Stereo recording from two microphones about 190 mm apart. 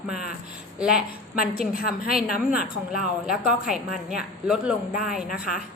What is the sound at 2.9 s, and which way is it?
A woman's voice, 5° right (ahead or behind).